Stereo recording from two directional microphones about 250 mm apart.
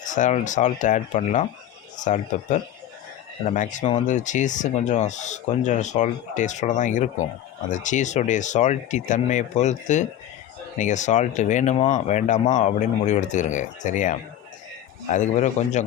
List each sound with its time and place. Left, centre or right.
0.0 s speech: left